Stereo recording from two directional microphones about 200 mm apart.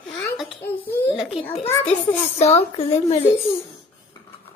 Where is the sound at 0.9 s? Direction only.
10° left (ahead or behind).